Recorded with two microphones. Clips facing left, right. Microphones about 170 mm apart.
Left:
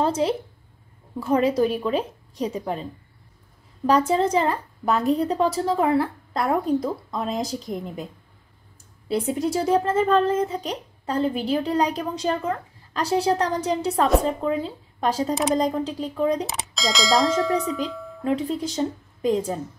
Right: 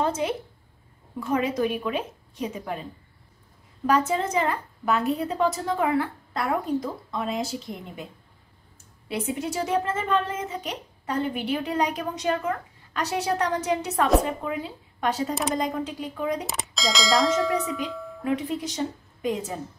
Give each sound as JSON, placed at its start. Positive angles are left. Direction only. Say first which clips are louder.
{"t": 0.0, "sound": "a woman's voice", "louder": "left 4 dB", "side_deg": 35}
{"t": 3.8, "sound": "a woman's voice", "louder": "left 4 dB", "side_deg": 35}
{"t": 9.1, "sound": "a woman's voice", "louder": "left 5 dB", "side_deg": 35}
{"t": 16.4, "sound": "music", "louder": "left 1 dB", "side_deg": 0}
{"t": 18.2, "sound": "speech", "louder": "left 3 dB", "side_deg": 30}